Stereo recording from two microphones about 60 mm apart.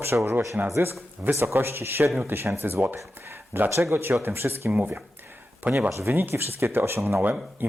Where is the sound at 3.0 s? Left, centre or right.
Right.